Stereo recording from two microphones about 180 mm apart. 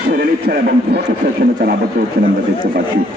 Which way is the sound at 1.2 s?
45° right (ahead or behind).